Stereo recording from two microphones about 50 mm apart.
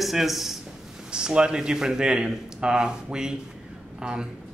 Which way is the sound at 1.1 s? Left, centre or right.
Centre.